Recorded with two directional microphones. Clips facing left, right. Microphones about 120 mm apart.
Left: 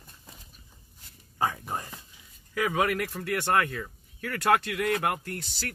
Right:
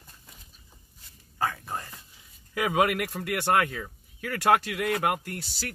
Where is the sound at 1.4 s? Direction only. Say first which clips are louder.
Left 1 dB; 15° left (ahead or behind).